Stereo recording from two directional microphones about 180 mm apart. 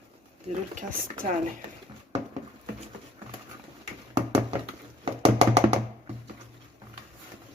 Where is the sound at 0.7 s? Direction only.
50° right (ahead or behind).